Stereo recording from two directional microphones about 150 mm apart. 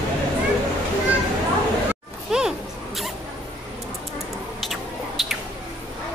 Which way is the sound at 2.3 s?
5° right (ahead or behind).